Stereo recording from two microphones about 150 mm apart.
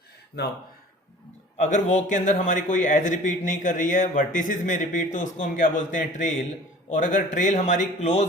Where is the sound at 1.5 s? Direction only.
50° left (ahead or behind).